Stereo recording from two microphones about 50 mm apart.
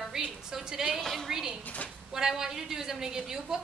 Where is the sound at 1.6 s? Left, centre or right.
Left.